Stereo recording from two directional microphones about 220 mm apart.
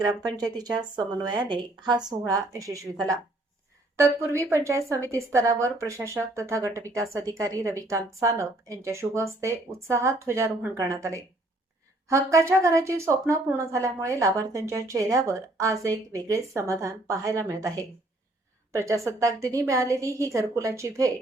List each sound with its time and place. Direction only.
0.0 s a woman's voice: 20° right (ahead or behind)